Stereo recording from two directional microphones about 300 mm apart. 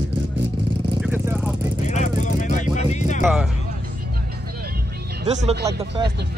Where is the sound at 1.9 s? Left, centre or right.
Left.